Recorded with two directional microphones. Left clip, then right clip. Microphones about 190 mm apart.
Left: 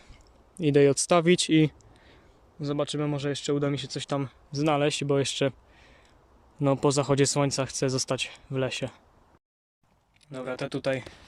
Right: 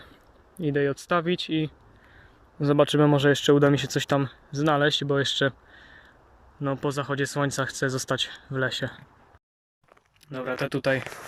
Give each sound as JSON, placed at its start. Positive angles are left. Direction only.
{"t": 0.6, "sound": "speech", "side_deg": 20}
{"t": 2.6, "sound": "speech", "side_deg": -10}
{"t": 10.2, "sound": "speech", "side_deg": 0}